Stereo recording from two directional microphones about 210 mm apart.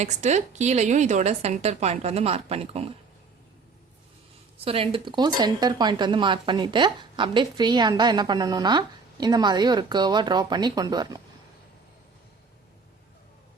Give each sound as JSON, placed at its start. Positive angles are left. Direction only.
{"t": 0.0, "sound": "a woman's voice", "side_deg": -35}
{"t": 4.5, "sound": "speech", "side_deg": -25}